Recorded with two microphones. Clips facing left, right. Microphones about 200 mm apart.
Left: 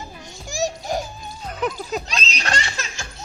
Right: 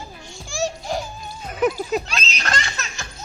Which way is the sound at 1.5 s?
10° right (ahead or behind).